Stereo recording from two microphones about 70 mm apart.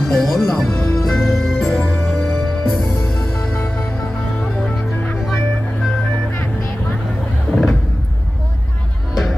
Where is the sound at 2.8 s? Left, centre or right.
Left.